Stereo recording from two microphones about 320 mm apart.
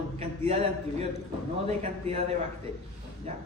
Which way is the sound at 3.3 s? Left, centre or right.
Centre.